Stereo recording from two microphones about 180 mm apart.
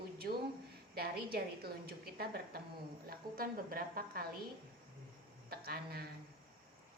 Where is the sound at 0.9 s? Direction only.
60° right (ahead or behind).